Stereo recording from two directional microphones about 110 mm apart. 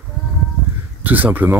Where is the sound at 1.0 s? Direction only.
15° right (ahead or behind).